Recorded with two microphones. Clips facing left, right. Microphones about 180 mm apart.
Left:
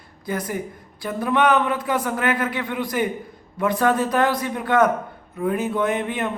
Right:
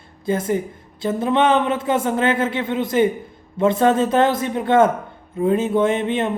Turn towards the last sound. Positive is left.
turn(degrees=-25)  # may be behind; listen again after turning